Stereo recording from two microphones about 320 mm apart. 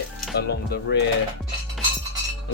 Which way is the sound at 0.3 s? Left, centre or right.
Left.